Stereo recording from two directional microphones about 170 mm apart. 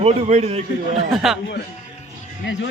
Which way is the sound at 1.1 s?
Centre (ahead or behind).